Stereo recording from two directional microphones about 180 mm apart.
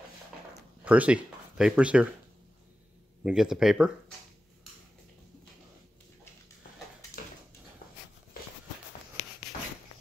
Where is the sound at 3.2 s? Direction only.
5° right (ahead or behind).